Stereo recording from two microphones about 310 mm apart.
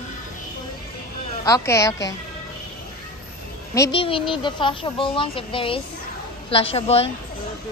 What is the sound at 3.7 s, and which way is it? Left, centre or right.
A child's voice, centre.